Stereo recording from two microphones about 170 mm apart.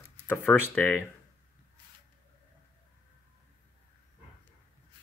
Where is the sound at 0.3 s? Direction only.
10° left (ahead or behind).